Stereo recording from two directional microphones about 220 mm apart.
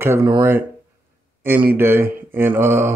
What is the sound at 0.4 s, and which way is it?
Speech, 10° right (ahead or behind).